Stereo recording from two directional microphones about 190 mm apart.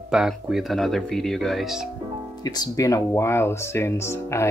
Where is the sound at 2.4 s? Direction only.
20° left (ahead or behind).